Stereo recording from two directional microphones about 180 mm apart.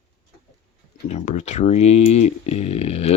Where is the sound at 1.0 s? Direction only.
40° left (ahead or behind).